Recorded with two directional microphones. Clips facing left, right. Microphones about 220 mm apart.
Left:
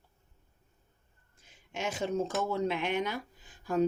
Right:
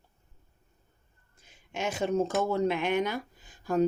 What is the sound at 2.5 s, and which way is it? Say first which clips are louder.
Speech: right 4 dB; 50° right (ahead or behind).